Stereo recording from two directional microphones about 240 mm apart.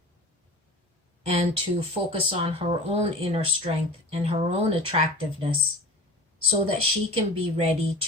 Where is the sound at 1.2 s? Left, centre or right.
Right.